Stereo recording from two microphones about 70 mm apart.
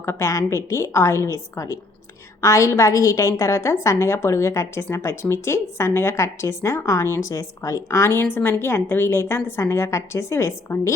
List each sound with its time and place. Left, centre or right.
0.0 s a woman's voice: left